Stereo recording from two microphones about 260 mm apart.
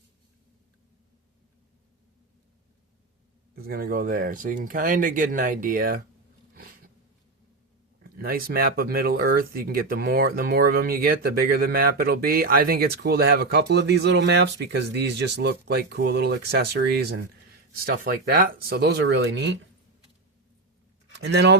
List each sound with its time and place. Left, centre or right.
3.5 s speech: right
8.2 s speech: right
21.2 s speech: right